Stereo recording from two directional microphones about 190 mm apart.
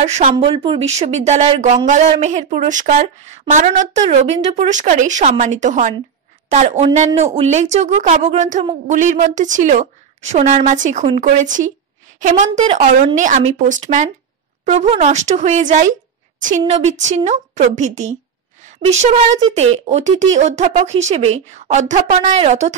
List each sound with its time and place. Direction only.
0.0 s speech: 30° right (ahead or behind)